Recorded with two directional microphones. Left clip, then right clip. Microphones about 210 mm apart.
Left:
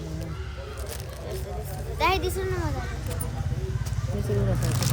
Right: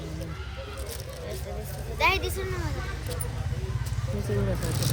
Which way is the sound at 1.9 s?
55° left (ahead or behind).